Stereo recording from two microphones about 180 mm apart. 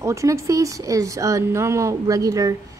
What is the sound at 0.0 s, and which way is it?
A woman's voice, 15° right (ahead or behind).